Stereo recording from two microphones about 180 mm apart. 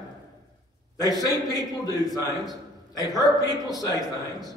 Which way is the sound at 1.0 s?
20° left (ahead or behind).